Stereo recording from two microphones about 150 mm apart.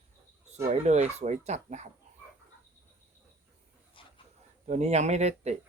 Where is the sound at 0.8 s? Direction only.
50° right (ahead or behind).